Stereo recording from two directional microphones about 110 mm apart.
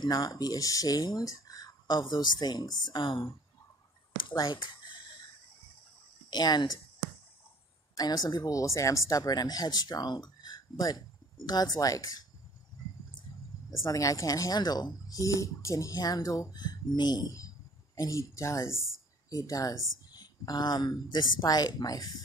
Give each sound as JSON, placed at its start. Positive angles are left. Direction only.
{"t": 0.0, "sound": "speech", "side_deg": 35}
{"t": 4.4, "sound": "speech", "side_deg": 45}
{"t": 6.3, "sound": "speech", "side_deg": 40}
{"t": 7.9, "sound": "speech", "side_deg": 35}
{"t": 13.7, "sound": "speech", "side_deg": 30}